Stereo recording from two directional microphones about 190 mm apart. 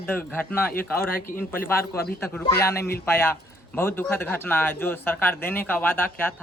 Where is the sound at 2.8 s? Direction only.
55° left (ahead or behind).